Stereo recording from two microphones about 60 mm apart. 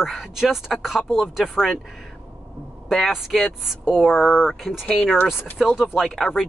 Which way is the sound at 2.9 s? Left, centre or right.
Centre.